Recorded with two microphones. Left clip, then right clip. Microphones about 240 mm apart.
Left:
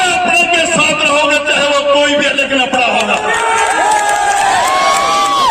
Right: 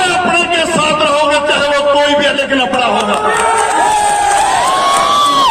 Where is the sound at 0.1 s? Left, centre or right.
Left.